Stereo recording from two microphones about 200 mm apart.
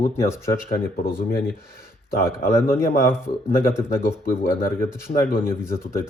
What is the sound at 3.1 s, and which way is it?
Speech, 15° left (ahead or behind).